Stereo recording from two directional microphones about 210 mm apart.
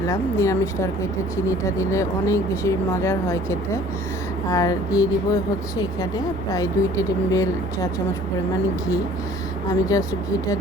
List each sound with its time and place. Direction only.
0.1 s speech: 15° left (ahead or behind)
9.9 s speech: 15° left (ahead or behind)